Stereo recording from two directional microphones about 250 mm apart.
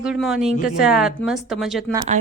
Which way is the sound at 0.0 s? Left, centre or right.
Centre.